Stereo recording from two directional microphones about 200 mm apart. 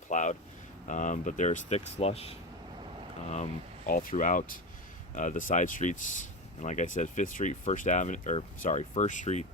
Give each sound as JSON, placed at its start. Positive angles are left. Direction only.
{"t": 0.1, "sound": "speech", "side_deg": 40}